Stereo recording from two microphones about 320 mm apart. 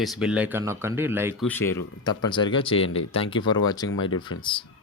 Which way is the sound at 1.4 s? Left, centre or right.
Centre.